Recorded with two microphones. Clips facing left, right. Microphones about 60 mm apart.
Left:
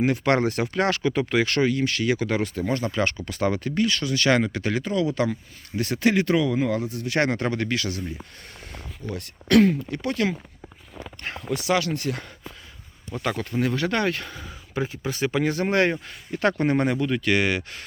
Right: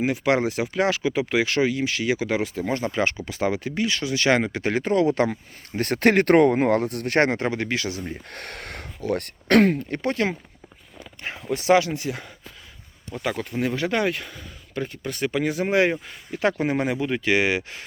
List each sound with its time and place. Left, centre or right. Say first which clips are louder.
0.0 s speech: even; centre; by 7.1 s right
7.3 s speech: even; right
8.3 s speech: right 7 dB; right
11.2 s speech: right 1 dB; centre
11.5 s speech: right 5 dB; right
13.1 s speech: left 1 dB; centre